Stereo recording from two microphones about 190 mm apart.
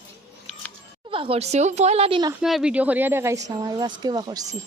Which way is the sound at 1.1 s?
30° right (ahead or behind).